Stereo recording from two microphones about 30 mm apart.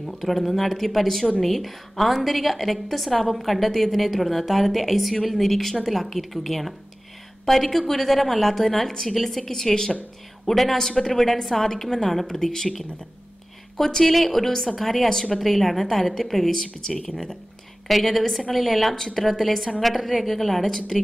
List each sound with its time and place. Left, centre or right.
0.2 s a woman's voice: centre
10.4 s a woman's voice: centre
10.8 s a woman's voice: centre
13.7 s speech: centre
14.0 s a woman's voice: centre
15.0 s a woman's voice: centre
15.3 s a woman's voice: centre
18.9 s a woman's voice: centre